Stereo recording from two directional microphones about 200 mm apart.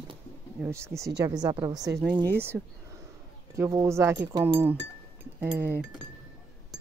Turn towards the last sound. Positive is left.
turn(degrees=-10)  # may be behind; listen again after turning